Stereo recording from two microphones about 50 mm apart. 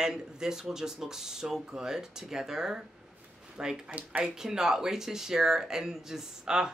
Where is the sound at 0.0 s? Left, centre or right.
Centre.